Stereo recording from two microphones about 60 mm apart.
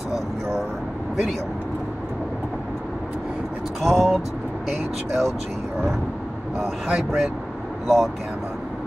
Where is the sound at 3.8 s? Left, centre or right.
Centre.